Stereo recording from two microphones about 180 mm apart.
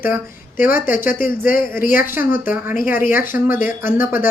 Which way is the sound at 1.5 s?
50° left (ahead or behind).